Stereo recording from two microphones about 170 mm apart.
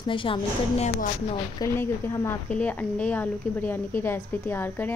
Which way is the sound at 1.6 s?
15° left (ahead or behind).